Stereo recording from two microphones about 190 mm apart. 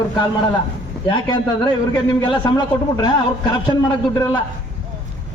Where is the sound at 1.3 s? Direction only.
25° left (ahead or behind).